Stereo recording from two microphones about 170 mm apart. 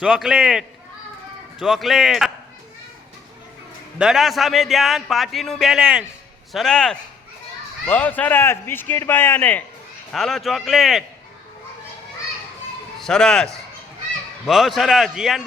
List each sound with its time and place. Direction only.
0.0 s speech: 5° right (ahead or behind)
3.9 s a man's voice: 5° right (ahead or behind)
13.0 s speech: 5° left (ahead or behind)